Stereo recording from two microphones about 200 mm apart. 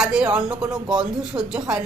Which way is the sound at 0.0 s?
5° right (ahead or behind).